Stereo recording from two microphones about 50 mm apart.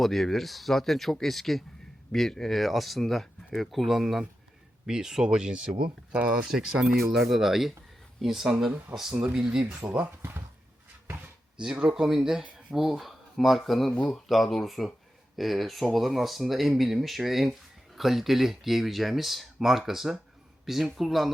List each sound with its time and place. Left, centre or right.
0.0 s speech: centre
9.8 s speech: right
11.5 s speech: centre